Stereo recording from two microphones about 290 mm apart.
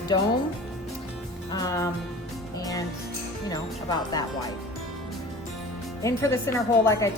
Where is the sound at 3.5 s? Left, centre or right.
Centre.